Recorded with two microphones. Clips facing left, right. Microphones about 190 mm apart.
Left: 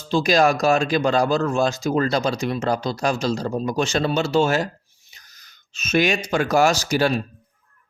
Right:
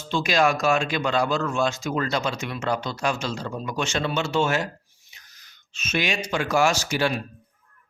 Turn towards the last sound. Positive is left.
turn(degrees=40)  # may be behind; listen again after turning